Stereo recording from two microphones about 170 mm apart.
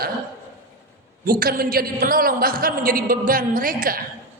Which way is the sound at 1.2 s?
60° right (ahead or behind).